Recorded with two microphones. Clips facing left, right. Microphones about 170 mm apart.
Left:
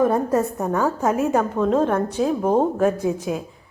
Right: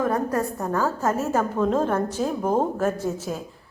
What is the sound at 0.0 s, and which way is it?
Speech, 25° left (ahead or behind).